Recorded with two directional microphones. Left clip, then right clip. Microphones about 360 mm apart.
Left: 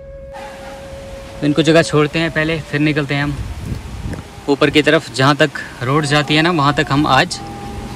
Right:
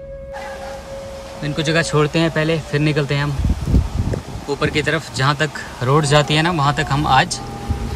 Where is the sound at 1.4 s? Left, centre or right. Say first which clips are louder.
Left 7 dB; centre.